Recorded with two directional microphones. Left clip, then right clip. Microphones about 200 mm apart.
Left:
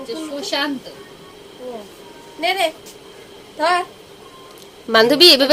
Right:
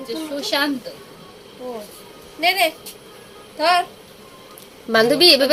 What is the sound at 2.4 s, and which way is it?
A woman's voice, 10° left (ahead or behind).